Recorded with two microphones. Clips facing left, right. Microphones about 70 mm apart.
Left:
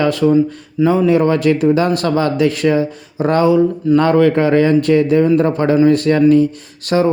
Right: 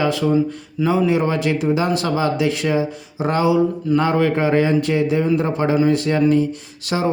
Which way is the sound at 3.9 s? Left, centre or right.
Left.